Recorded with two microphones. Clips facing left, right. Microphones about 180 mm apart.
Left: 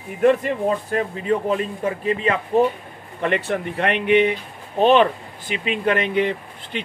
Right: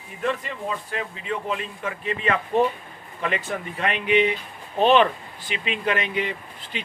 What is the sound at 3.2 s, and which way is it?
Speech, 65° left (ahead or behind).